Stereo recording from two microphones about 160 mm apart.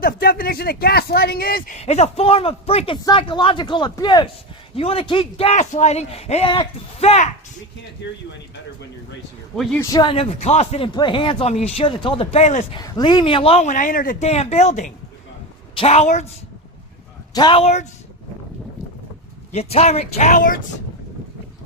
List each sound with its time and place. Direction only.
0.0 s speech: 65° left (ahead or behind)
1.7 s speech: 45° left (ahead or behind)
8.0 s speech: 90° left
9.7 s speech: 25° left (ahead or behind); by 12.6 s 45° left (ahead or behind)
12.8 s speech: 25° left (ahead or behind); by 14.3 s 60° left (ahead or behind)
14.3 s speech: 40° left (ahead or behind)
15.7 s speech: 35° left (ahead or behind)
17.3 s speech: 25° left (ahead or behind)
17.6 s speech: 40° left (ahead or behind)
19.5 s speech: 40° left (ahead or behind)